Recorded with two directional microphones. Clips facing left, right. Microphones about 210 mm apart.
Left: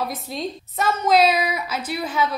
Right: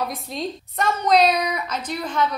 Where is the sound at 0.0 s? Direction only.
Centre (ahead or behind).